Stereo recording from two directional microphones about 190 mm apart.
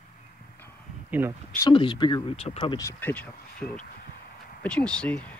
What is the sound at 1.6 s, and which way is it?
Speech, 25° left (ahead or behind).